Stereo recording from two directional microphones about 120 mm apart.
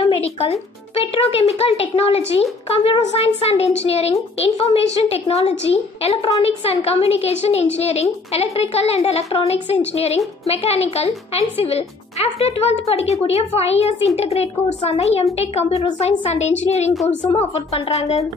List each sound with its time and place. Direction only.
0.0 s a woman's voice: 50° left (ahead or behind)